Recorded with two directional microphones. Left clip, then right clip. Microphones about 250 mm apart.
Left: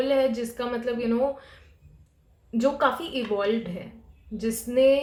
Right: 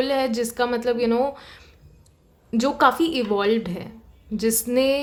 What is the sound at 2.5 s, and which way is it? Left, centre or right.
Speech, right.